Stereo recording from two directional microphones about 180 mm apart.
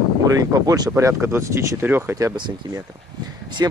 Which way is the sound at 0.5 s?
20° right (ahead or behind).